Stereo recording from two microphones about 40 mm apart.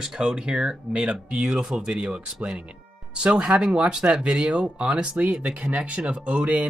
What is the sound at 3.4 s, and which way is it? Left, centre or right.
Speech, right.